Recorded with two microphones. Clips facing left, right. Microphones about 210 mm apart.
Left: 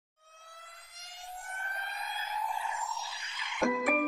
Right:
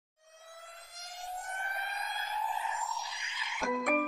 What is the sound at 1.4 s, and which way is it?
Music, 20° right (ahead or behind).